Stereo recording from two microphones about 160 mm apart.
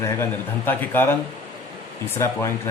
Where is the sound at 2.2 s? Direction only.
15° left (ahead or behind).